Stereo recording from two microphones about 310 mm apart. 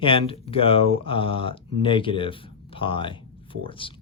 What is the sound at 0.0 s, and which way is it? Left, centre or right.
A woman's voice, centre.